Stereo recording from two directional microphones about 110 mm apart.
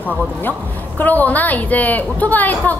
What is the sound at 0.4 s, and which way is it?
A woman's voice, 15° left (ahead or behind).